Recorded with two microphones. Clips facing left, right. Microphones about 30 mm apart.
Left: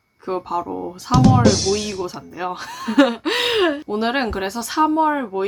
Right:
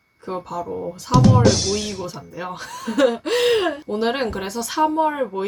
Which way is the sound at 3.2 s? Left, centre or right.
Left.